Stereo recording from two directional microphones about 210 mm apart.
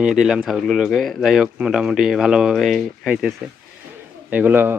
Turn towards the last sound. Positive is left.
turn(degrees=-10)  # may be behind; listen again after turning